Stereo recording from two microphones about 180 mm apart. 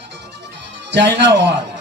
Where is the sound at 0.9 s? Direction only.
80° right.